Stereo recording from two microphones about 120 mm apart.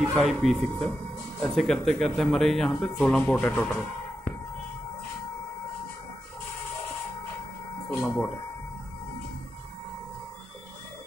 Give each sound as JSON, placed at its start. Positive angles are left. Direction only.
{"t": 0.1, "sound": "speech", "side_deg": 0}
{"t": 7.9, "sound": "speech", "side_deg": 20}